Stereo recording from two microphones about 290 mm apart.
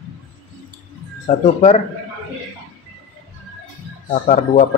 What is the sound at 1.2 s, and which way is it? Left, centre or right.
Speech, left.